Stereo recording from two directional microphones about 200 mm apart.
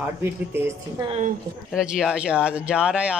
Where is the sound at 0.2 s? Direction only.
10° right (ahead or behind).